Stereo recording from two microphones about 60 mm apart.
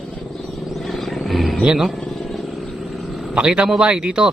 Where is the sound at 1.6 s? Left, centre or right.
Centre.